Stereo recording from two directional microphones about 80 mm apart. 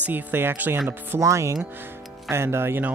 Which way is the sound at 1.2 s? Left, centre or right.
Right.